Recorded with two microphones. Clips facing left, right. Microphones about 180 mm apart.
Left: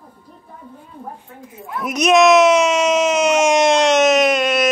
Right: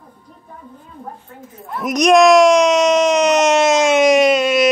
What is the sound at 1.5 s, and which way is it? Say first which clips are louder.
Speech: right 3 dB; 5° left (ahead or behind).